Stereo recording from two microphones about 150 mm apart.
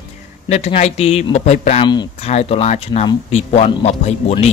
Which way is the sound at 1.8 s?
30° left (ahead or behind).